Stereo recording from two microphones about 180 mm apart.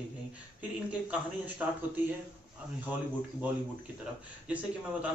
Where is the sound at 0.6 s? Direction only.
10° right (ahead or behind).